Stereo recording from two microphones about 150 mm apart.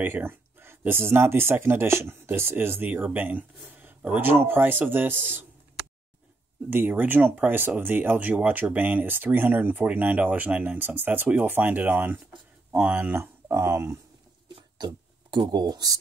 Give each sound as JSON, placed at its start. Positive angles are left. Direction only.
{"t": 0.0, "sound": "speech", "side_deg": -15}
{"t": 6.7, "sound": "speech", "side_deg": -15}
{"t": 14.5, "sound": "a sound", "side_deg": -30}